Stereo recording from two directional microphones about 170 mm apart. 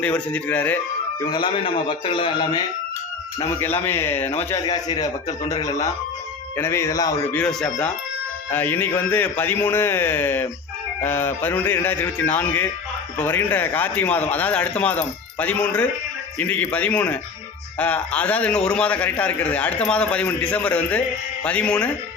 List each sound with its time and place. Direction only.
0.0 s a man's voice: 10° left (ahead or behind)
1.2 s a man's voice: 25° left (ahead or behind)
3.8 s a man's voice: 15° left (ahead or behind)
4.5 s speech: 25° left (ahead or behind)
7.3 s a man's voice: 5° left (ahead or behind)